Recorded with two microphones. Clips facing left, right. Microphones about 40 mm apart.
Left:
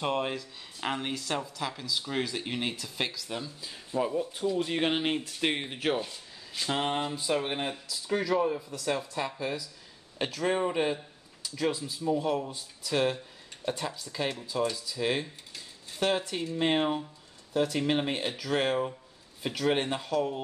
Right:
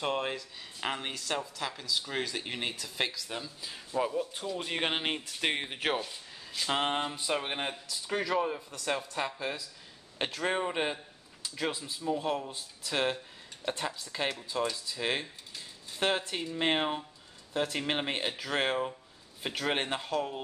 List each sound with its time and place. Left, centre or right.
0.0 s speech: centre
5.9 s a sound: centre
6.7 s speech: centre